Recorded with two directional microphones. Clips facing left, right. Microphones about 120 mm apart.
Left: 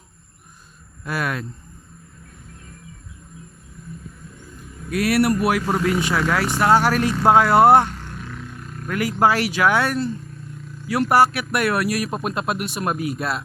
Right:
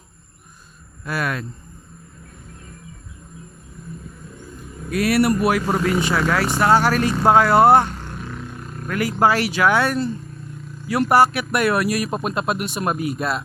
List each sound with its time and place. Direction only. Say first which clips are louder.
1.0 s speech: right 1 dB; 15° left (ahead or behind)
4.9 s speech: right 1 dB; 10° left (ahead or behind)
5.6 s speech: right 1 dB; centre (ahead or behind)
6.6 s speech: even; 10° left (ahead or behind)
7.9 s a sound: right 2 dB; 30° right (ahead or behind)
8.9 s speech: even; 10° left (ahead or behind)